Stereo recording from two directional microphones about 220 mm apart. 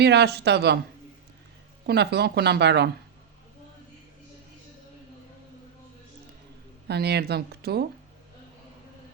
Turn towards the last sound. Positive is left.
turn(degrees=-45)  # may be behind; listen again after turning